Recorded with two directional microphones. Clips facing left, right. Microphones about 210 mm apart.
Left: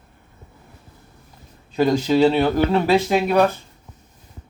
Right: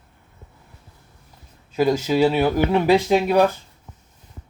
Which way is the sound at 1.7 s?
5° right (ahead or behind).